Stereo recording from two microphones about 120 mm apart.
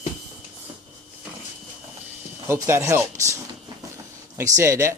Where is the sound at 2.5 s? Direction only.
20° right (ahead or behind).